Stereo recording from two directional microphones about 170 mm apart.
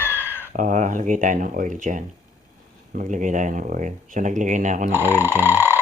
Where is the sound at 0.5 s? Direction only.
50° right (ahead or behind).